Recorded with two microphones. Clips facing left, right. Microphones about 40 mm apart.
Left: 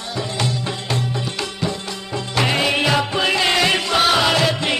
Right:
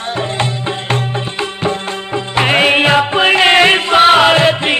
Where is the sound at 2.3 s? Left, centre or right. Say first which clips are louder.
Right 7 dB; right.